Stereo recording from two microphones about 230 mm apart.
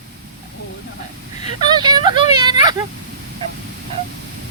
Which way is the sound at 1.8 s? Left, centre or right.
Centre.